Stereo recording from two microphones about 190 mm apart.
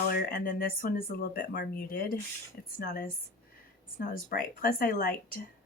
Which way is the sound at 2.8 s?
60° left (ahead or behind).